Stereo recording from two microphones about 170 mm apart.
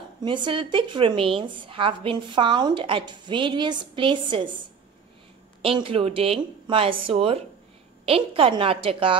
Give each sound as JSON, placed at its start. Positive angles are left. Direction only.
{"t": 0.2, "sound": "a woman's voice", "side_deg": -30}